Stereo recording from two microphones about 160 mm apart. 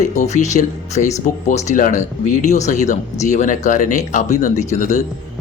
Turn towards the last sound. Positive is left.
turn(degrees=45)  # may be behind; listen again after turning